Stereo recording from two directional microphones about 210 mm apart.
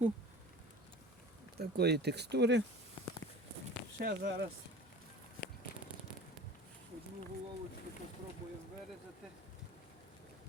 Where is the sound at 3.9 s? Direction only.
45° right (ahead or behind).